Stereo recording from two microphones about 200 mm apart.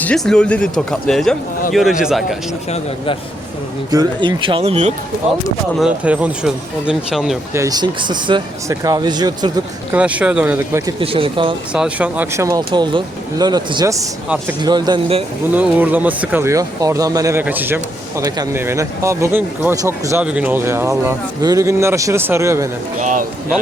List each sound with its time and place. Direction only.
0.0 s speech: 5° left (ahead or behind)
3.9 s speech: 25° right (ahead or behind)
5.8 s speech: 5° right (ahead or behind)
7.5 s speech: 15° right (ahead or behind)
10.0 s speech: 5° right (ahead or behind)
11.0 s speech: 25° right (ahead or behind)
11.7 s speech: 5° right (ahead or behind); by 15.2 s 20° right (ahead or behind)
15.5 s speech: 10° right (ahead or behind)
23.0 s speech: 40° right (ahead or behind)